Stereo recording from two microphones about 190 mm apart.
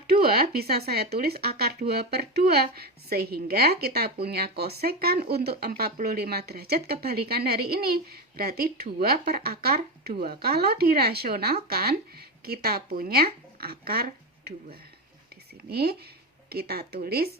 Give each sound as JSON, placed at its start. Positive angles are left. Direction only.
{"t": 0.1, "sound": "speech", "side_deg": -55}